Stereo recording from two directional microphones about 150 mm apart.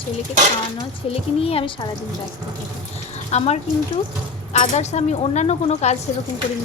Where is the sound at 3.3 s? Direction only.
50° left (ahead or behind).